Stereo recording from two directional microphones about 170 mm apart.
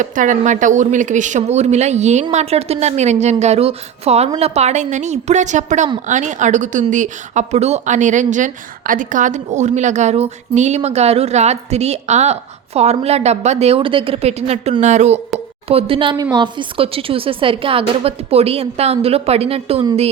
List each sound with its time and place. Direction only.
0.0 s speech: 50° right (ahead or behind)
15.7 s speech: 30° right (ahead or behind)